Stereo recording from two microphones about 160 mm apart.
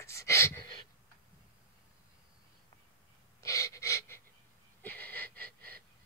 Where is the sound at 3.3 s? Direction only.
20° left (ahead or behind).